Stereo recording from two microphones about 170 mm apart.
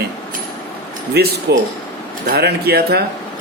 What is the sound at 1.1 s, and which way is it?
Speech, 70° right (ahead or behind).